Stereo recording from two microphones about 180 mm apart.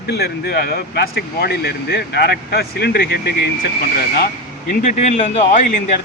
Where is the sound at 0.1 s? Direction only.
65° left (ahead or behind).